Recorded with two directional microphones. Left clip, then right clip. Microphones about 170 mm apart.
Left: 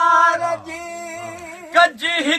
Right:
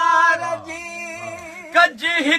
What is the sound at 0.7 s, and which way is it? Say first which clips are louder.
Music: even; 20° right (ahead or behind).